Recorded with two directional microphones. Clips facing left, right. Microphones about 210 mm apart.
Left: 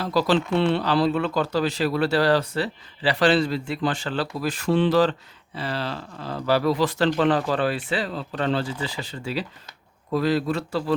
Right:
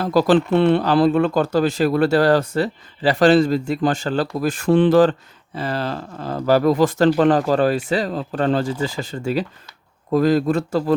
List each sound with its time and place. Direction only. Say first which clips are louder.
0.0 s speech: right 6 dB; 50° right (ahead or behind)